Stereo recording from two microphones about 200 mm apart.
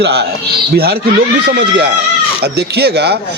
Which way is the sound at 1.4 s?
55° right (ahead or behind).